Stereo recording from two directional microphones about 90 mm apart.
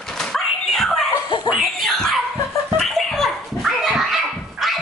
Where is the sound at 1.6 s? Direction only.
Centre (ahead or behind).